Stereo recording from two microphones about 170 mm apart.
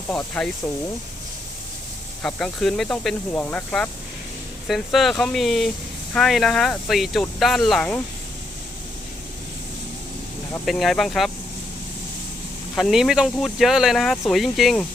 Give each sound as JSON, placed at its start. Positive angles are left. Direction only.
{"t": 0.1, "sound": "speech", "side_deg": 5}
{"t": 2.2, "sound": "speech", "side_deg": 0}
{"t": 10.7, "sound": "speech", "side_deg": 0}
{"t": 12.7, "sound": "speech", "side_deg": 0}